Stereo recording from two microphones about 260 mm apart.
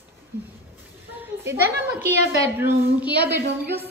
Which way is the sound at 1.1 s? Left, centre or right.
Centre.